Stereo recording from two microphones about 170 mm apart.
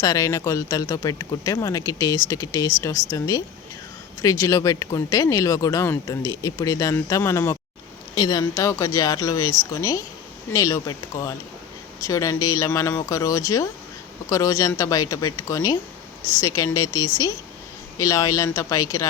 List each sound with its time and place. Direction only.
0.0 s speech: 20° left (ahead or behind)